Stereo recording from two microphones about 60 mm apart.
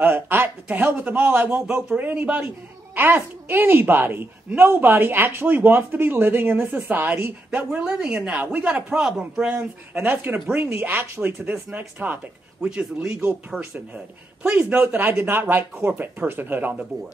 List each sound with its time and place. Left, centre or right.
0.0 s speech: right
0.9 s a man's voice: right
2.9 s speech: right
7.5 s speech: centre
8.5 s a man's voice: right
8.7 s speech: centre
9.9 s a man's voice: right
12.6 s speech: centre
13.5 s speech: centre
13.9 s a man's voice: centre
14.8 s speech: right